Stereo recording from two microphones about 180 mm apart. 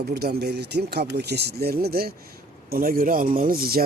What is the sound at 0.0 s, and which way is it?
Speech, 65° right (ahead or behind).